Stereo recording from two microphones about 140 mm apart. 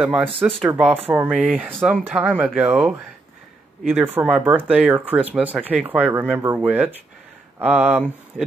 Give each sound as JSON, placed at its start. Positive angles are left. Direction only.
{"t": 0.0, "sound": "speech", "side_deg": -10}
{"t": 3.9, "sound": "speech", "side_deg": -10}
{"t": 8.3, "sound": "speech", "side_deg": 10}